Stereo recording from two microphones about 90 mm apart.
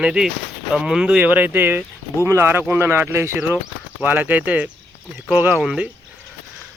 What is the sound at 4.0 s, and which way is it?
Speech, 20° right (ahead or behind).